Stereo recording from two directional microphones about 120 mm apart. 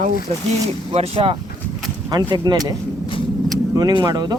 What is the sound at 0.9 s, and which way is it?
Speech, 55° right (ahead or behind).